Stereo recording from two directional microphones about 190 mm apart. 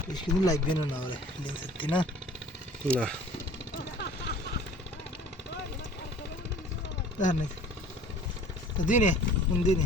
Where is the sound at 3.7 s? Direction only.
60° left (ahead or behind).